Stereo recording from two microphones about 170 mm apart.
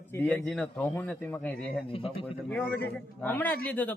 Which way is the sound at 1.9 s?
30° left (ahead or behind).